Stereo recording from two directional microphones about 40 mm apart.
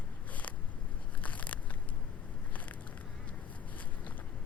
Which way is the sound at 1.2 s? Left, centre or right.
Left.